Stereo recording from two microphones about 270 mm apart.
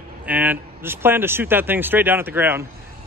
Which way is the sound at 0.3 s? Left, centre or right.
Centre.